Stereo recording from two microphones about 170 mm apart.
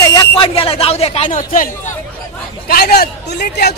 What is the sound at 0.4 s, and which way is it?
Speech, 35° left (ahead or behind).